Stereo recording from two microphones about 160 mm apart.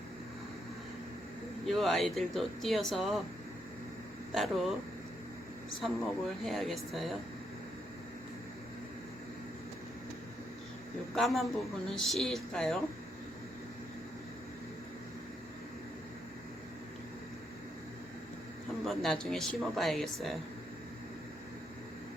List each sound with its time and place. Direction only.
1.6 s speech: centre (ahead or behind)
4.4 s speech: centre (ahead or behind)
5.8 s speech: centre (ahead or behind)
11.1 s speech: centre (ahead or behind)
18.9 s speech: 5° left (ahead or behind)